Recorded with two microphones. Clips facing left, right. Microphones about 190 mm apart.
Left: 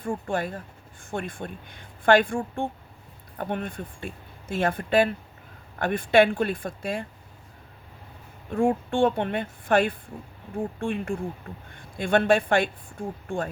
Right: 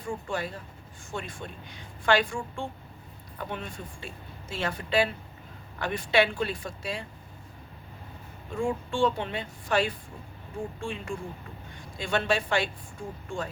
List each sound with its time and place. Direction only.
0.0 s speech: 55° left (ahead or behind)
8.5 s speech: 60° left (ahead or behind)